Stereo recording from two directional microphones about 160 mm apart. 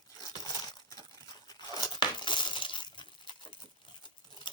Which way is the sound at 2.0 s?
30° left (ahead or behind).